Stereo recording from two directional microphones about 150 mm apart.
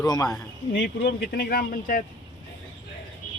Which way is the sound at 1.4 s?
80° left.